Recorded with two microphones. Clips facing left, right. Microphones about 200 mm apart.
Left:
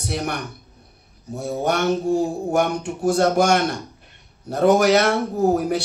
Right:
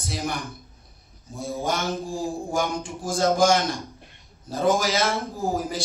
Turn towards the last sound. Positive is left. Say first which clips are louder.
# left 8 dB
turn(degrees=65)  # may be behind; listen again after turning